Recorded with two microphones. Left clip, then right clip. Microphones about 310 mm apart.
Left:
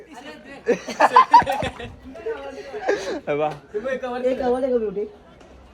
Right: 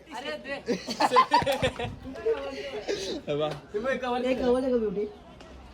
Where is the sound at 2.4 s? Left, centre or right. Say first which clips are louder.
Left 8 dB; centre.